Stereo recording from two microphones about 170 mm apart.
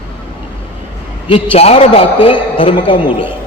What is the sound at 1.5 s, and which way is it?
A woman's voice, 35° left (ahead or behind).